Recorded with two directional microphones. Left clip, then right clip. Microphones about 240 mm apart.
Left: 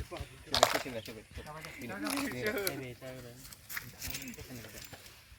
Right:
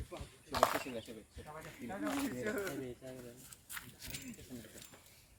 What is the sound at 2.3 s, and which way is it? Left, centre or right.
Speech, left.